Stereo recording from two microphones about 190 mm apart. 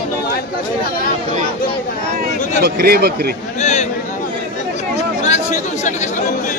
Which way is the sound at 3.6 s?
35° left (ahead or behind).